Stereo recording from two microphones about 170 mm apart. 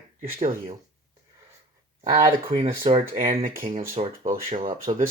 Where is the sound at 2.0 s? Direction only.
25° right (ahead or behind).